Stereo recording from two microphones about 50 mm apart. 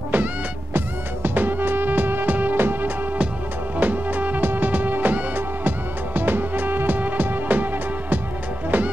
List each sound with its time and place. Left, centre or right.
0.7 s music: right
3.7 s music: right